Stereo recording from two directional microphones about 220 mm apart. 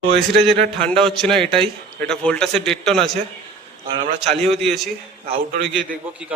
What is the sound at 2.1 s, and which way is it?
Speech, 5° left (ahead or behind).